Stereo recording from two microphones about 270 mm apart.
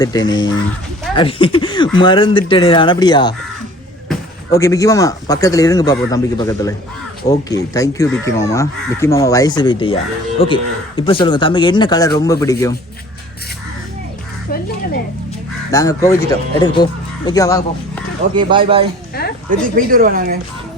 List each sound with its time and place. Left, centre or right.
0.0 s speech: centre
15.7 s speech: centre
18.3 s speech: centre
19.5 s speech: right